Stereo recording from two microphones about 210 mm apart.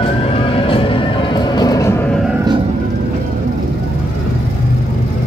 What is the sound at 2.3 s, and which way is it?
Music, 20° right (ahead or behind).